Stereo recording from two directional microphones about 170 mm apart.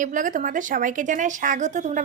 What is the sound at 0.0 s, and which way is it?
Speech, 50° right (ahead or behind).